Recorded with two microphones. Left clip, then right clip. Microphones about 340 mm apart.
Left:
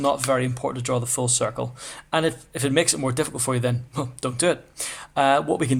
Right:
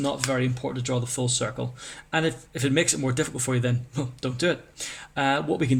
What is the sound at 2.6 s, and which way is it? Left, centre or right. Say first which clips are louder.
A man's voice: left 2 dB; centre.